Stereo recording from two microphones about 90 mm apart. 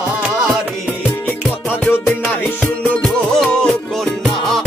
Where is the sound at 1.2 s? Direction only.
20° left (ahead or behind); by 4.5 s centre (ahead or behind).